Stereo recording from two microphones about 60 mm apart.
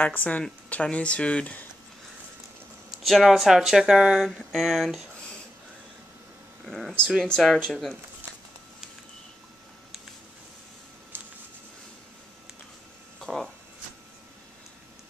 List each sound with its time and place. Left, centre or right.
0.0 s speech: left
3.0 s speech: centre
4.2 s speech: centre
6.6 s speech: centre
13.2 s a sound: centre